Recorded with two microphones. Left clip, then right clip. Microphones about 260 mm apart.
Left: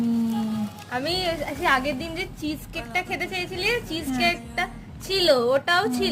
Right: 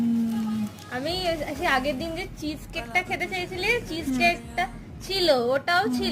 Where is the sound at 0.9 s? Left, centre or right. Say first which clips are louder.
Left 2 dB; centre.